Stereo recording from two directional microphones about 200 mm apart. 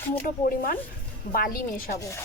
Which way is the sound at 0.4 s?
45° left (ahead or behind).